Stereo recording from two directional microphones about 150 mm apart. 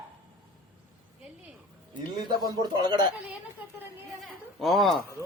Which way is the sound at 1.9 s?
30° right (ahead or behind).